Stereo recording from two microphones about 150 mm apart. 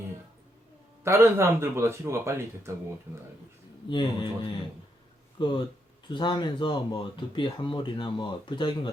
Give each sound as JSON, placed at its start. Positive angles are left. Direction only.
{"t": 1.0, "sound": "speech", "side_deg": -15}
{"t": 3.8, "sound": "speech", "side_deg": 30}